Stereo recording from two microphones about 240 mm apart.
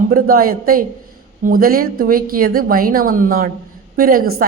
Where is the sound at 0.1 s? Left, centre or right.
Right.